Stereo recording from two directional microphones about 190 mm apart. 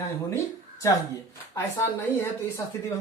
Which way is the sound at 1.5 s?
15° left (ahead or behind).